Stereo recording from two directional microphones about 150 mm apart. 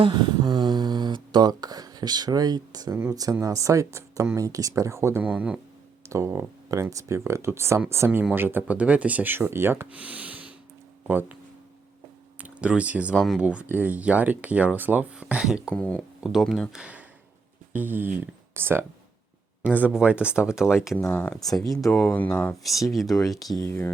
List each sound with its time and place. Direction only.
0.0 s speech: 30° right (ahead or behind); by 5.5 s 10° right (ahead or behind)
6.1 s speech: 20° right (ahead or behind)
12.4 s speech: 10° right (ahead or behind)
15.7 s speech: 10° left (ahead or behind)
21.0 s speech: 15° left (ahead or behind)
21.8 s speech: centre (ahead or behind)
22.6 s speech: centre (ahead or behind)
23.6 s speech: 15° left (ahead or behind)